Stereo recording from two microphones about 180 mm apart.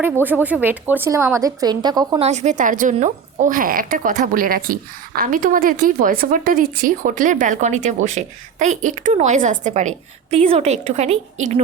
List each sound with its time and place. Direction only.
0.0 s a woman's voice: 10° right (ahead or behind)
2.2 s a woman's voice: 40° right (ahead or behind)